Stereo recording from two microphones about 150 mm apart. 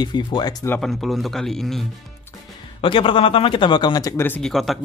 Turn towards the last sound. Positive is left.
turn(degrees=0)  # may be behind; listen again after turning